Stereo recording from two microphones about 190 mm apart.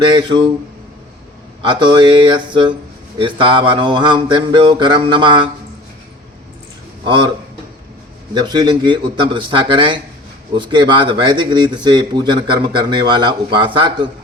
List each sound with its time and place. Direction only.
0.0 s speech: 25° right (ahead or behind)
1.6 s speech: 25° right (ahead or behind)
7.0 s a man's voice: 25° right (ahead or behind)
8.3 s speech: 20° right (ahead or behind)